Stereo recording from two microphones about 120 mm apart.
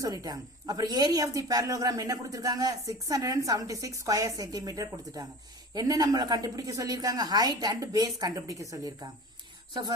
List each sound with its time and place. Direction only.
0.0 s speech: 30° right (ahead or behind)